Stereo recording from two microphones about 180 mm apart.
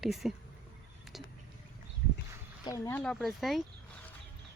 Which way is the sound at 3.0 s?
5° left (ahead or behind).